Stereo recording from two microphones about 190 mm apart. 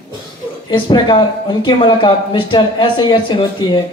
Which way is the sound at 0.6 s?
25° left (ahead or behind).